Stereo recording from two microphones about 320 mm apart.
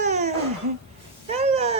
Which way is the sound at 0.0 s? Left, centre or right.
Right.